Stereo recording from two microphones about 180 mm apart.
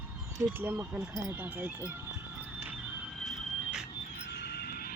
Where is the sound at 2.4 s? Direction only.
10° right (ahead or behind).